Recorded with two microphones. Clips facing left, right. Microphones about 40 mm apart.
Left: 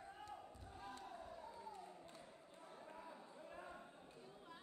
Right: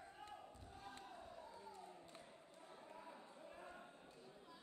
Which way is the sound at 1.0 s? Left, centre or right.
Left.